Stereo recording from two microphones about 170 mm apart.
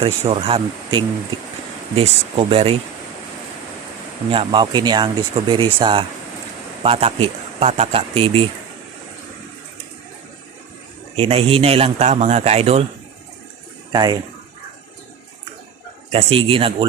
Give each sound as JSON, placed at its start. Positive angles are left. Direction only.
{"t": 0.0, "sound": "a man's voice", "side_deg": -35}
{"t": 4.3, "sound": "a man's voice", "side_deg": -30}
{"t": 11.2, "sound": "a man's voice", "side_deg": -35}
{"t": 13.9, "sound": "speech", "side_deg": -25}
{"t": 16.1, "sound": "a man's voice", "side_deg": -35}